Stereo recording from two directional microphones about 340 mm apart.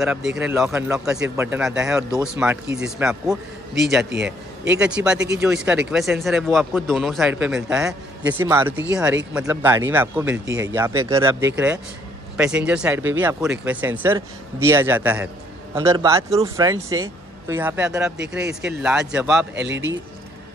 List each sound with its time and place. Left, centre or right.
0.0 s speech: centre
4.0 s a man's voice: right
4.7 s speech: centre
19.5 s speech: right